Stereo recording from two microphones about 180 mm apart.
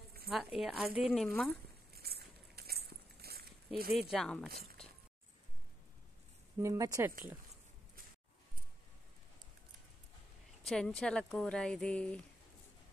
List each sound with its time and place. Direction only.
0.3 s speech: centre (ahead or behind)
2.0 s a sound: 60° right (ahead or behind)
4.1 s speech: centre (ahead or behind)
6.6 s speech: 20° right (ahead or behind)
10.6 s speech: 5° left (ahead or behind)